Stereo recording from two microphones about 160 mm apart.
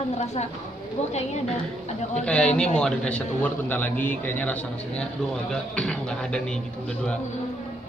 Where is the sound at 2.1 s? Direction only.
5° left (ahead or behind).